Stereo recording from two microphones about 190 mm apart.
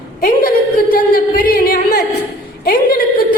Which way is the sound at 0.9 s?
50° left (ahead or behind).